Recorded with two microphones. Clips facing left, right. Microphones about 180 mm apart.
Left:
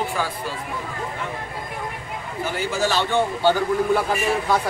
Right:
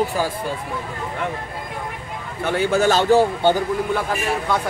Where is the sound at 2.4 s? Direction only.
65° right (ahead or behind).